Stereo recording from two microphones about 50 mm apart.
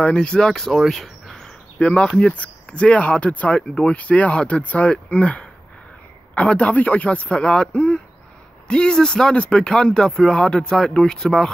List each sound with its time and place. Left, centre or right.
0.0 s speech: centre
0.7 s a sound: centre
1.8 s speech: centre